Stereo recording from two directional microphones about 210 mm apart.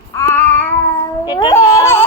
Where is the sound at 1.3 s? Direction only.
20° left (ahead or behind).